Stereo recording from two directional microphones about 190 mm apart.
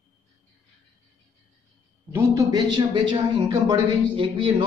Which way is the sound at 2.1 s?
15° right (ahead or behind).